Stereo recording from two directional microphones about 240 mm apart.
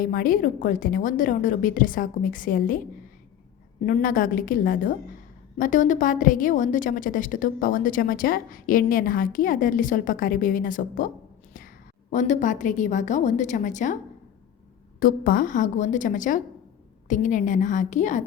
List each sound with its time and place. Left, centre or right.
0.0 s a woman's voice: left
3.8 s a woman's voice: left
12.1 s a woman's voice: left
14.9 s a woman's voice: left